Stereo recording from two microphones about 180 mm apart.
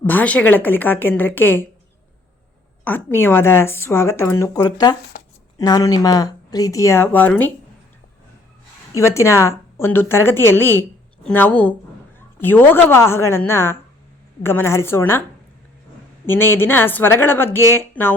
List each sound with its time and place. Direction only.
0.0 s speech: 10° left (ahead or behind)
2.8 s speech: 10° left (ahead or behind)
9.0 s speech: 15° left (ahead or behind)
16.2 s speech: 10° left (ahead or behind)